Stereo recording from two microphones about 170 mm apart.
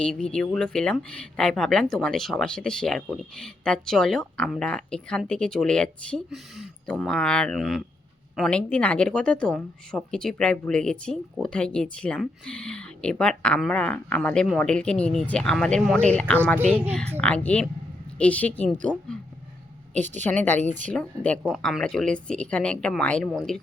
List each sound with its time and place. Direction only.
0.0 s a woman's voice: 5° left (ahead or behind)
20.0 s a woman's voice: 45° right (ahead or behind)
20.3 s a woman's voice: 10° left (ahead or behind)